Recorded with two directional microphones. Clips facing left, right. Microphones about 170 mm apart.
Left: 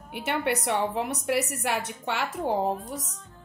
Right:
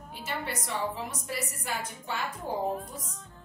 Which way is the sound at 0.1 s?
65° left (ahead or behind).